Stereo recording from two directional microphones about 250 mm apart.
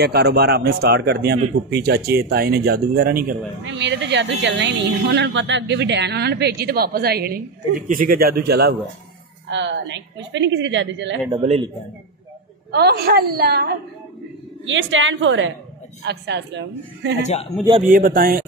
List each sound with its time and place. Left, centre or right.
0.0 s a woman's voice: right
11.4 s a man's voice: right
12.7 s speech: right
14.7 s a woman's voice: right
17.2 s a man's voice: left
17.8 s speech: right